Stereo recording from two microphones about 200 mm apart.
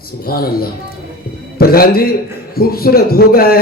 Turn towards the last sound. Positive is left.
turn(degrees=50)  # may be behind; listen again after turning